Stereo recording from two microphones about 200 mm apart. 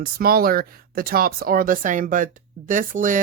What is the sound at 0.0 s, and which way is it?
Speech, 45° right (ahead or behind).